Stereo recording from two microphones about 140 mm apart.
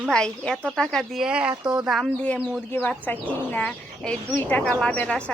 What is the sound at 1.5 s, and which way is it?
Speech, 30° right (ahead or behind).